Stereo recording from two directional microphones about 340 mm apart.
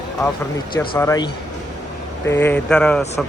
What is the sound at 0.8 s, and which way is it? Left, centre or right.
Speech, centre.